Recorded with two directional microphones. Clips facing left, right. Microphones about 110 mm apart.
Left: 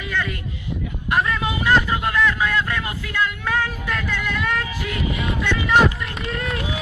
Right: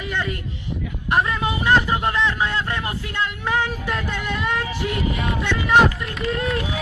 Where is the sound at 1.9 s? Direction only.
25° right (ahead or behind).